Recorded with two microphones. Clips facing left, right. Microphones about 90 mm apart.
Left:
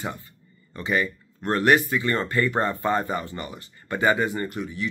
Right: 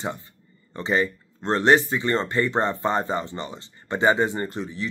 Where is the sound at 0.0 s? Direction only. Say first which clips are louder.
Right 2 dB; 25° right (ahead or behind).